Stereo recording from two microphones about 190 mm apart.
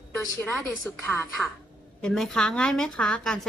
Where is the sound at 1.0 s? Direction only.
10° left (ahead or behind).